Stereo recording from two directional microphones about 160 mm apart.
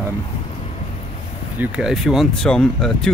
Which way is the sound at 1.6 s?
5° right (ahead or behind).